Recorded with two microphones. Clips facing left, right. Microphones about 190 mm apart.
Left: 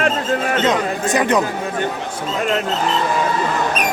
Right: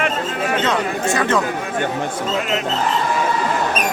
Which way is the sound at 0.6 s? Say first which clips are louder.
Left 1 dB; 15° left (ahead or behind).